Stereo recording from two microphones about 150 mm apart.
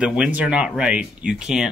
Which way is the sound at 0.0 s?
5° right (ahead or behind).